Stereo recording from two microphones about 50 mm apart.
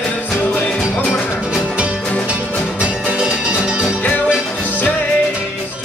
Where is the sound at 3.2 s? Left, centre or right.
Centre.